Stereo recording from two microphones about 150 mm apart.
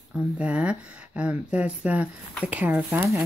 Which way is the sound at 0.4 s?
10° right (ahead or behind).